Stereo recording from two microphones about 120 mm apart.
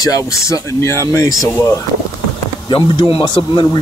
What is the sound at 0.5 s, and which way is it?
Speech, 25° left (ahead or behind).